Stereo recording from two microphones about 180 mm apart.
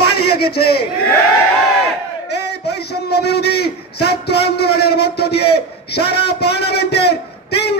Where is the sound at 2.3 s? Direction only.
65° left (ahead or behind).